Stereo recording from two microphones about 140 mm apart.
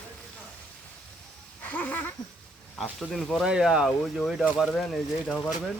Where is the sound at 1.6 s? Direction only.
10° left (ahead or behind).